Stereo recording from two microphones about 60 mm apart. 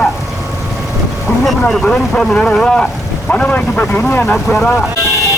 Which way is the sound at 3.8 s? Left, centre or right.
Left.